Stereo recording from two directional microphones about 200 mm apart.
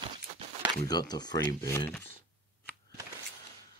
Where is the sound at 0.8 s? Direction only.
20° left (ahead or behind).